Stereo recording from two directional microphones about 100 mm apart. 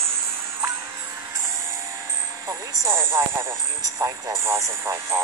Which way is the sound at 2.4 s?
30° right (ahead or behind).